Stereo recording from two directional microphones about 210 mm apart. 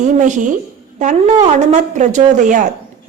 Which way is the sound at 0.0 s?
35° right (ahead or behind).